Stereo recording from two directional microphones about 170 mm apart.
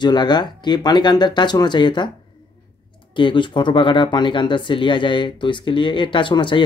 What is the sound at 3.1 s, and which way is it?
Speech, 30° left (ahead or behind).